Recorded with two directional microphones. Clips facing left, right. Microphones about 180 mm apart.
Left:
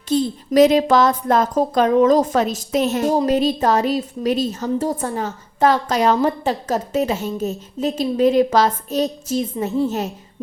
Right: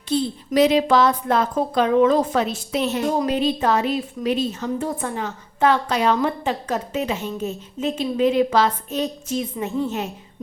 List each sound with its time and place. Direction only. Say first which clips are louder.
0.1 s a woman's voice: left 3 dB; 45° left (ahead or behind)